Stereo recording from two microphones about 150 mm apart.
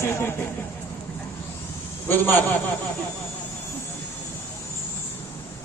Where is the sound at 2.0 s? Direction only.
15° left (ahead or behind).